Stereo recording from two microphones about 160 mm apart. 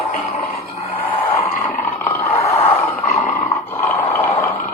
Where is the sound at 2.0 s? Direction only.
20° left (ahead or behind).